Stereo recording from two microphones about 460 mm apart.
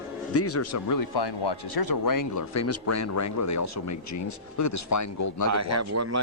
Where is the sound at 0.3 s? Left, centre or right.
Left.